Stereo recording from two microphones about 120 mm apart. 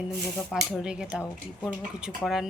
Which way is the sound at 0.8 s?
5° right (ahead or behind).